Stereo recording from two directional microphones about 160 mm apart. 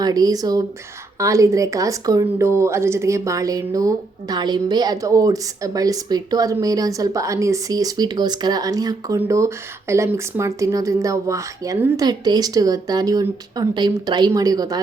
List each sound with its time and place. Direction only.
0.0 s a woman's voice: 25° right (ahead or behind)